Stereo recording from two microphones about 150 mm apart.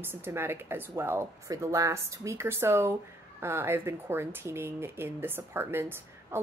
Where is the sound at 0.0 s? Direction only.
15° right (ahead or behind).